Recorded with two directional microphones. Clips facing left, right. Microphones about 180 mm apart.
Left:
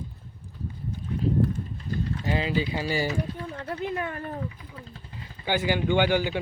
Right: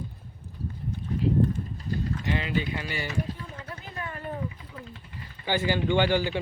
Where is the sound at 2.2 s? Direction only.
35° left (ahead or behind).